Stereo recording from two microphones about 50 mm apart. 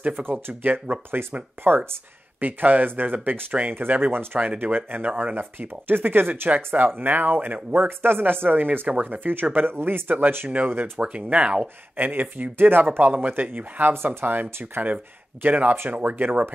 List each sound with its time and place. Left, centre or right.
0.0 s speech: right
1.2 s speech: right
1.6 s speech: right
2.4 s speech: right
4.4 s speech: right
11.0 s speech: right
11.6 s speech: right